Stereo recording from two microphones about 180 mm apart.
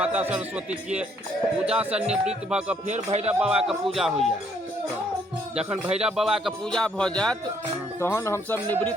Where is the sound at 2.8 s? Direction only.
40° right (ahead or behind).